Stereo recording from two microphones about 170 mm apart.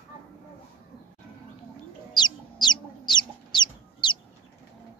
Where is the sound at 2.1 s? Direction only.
25° left (ahead or behind).